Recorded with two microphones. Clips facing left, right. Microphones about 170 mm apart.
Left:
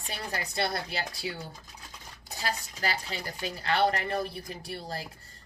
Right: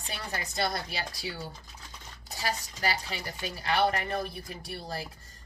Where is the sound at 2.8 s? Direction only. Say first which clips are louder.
Right 1 dB; 40° left (ahead or behind).